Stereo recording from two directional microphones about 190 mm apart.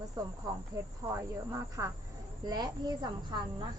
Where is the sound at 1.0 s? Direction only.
15° right (ahead or behind).